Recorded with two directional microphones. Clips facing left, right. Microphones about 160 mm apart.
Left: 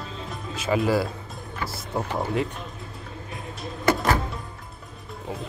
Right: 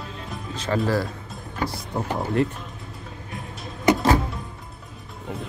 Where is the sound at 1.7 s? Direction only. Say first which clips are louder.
Right 1 dB; centre (ahead or behind).